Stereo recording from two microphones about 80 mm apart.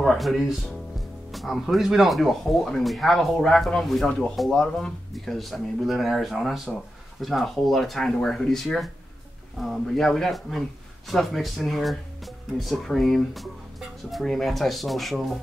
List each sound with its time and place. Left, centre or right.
0.0 s speech: centre